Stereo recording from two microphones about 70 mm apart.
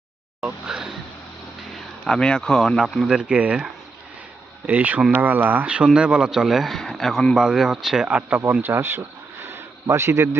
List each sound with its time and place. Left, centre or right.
0.4 s speech: centre
1.7 s speech: centre
3.1 s speech: centre
4.6 s speech: right; by 8.0 s centre
8.0 s speech: centre
8.7 s a sound: right
9.8 s speech: right